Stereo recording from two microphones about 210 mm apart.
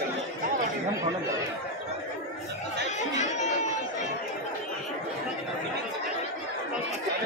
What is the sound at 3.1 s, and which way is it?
Chatter, 35° left (ahead or behind).